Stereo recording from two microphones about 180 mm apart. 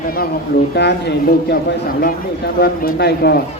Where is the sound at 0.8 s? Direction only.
70° left (ahead or behind).